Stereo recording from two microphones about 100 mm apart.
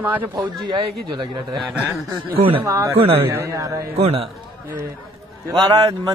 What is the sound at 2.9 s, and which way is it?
Speech, 75° right (ahead or behind).